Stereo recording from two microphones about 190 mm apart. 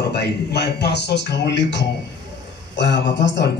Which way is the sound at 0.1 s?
60° left (ahead or behind).